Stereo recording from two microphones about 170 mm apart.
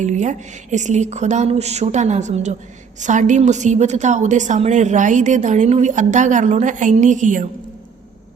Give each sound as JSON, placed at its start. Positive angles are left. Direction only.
{"t": 0.0, "sound": "a woman's voice", "side_deg": -45}